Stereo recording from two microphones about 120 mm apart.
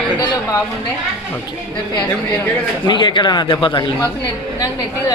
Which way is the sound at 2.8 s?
40° left (ahead or behind).